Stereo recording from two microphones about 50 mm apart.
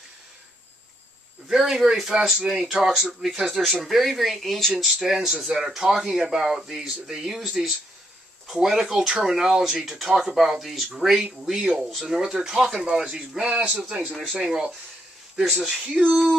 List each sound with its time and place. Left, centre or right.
1.5 s speech: centre
5.0 s speech: centre
13.5 s speech: right